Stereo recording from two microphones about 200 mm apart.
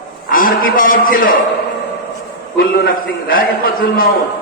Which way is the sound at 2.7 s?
45° left (ahead or behind).